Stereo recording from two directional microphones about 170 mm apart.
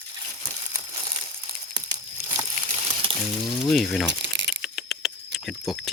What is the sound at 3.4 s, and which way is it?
Speech, centre (ahead or behind).